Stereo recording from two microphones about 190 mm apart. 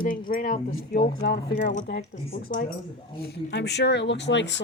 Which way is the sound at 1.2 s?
55° left (ahead or behind).